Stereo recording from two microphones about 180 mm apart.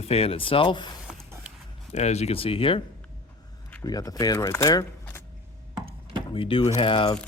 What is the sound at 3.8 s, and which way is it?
Speech, 20° left (ahead or behind).